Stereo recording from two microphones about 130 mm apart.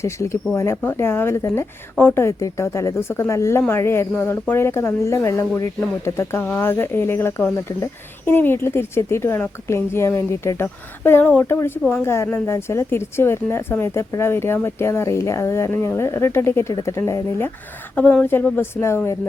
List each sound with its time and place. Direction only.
0.0 s a woman's voice: 20° left (ahead or behind)